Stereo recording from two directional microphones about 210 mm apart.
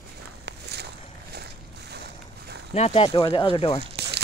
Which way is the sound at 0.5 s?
50° right (ahead or behind).